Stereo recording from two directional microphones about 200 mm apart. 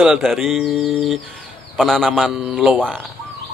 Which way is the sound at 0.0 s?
Centre (ahead or behind).